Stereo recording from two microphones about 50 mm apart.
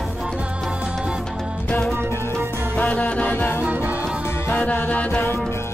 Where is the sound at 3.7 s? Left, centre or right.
Right.